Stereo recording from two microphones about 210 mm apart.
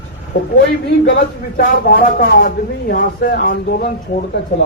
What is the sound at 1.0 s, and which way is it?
Speech, 50° left (ahead or behind).